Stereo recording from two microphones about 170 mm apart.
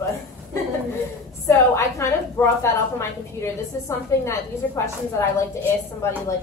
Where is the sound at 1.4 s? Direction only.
15° left (ahead or behind).